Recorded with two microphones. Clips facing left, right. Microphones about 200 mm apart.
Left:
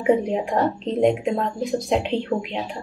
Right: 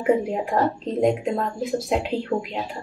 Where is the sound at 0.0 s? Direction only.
5° right (ahead or behind).